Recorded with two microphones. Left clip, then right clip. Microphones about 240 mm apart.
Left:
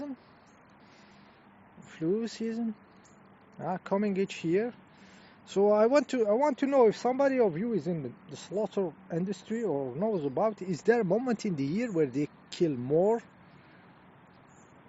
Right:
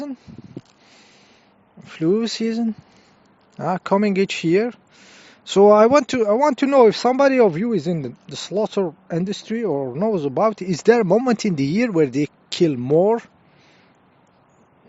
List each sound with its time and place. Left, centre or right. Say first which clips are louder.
1.8 s speech: right 11 dB; right